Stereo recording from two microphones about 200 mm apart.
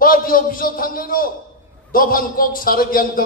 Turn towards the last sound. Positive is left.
turn(degrees=45)  # may be behind; listen again after turning